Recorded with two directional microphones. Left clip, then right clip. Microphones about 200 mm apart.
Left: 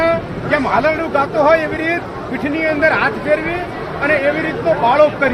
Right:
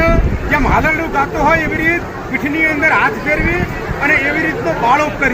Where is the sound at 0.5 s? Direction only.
15° left (ahead or behind).